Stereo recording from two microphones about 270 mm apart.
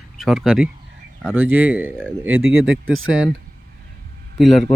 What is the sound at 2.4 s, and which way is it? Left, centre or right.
Speech, right.